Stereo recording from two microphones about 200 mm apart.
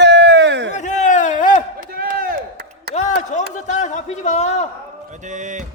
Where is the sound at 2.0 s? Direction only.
50° right (ahead or behind).